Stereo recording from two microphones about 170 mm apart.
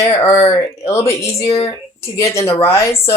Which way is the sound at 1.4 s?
35° left (ahead or behind).